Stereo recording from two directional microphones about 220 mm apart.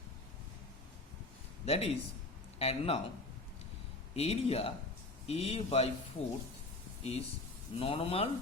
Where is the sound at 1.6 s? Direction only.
25° left (ahead or behind).